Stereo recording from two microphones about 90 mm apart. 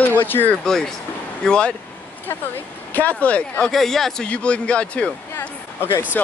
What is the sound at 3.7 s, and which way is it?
A man's voice, 5° left (ahead or behind).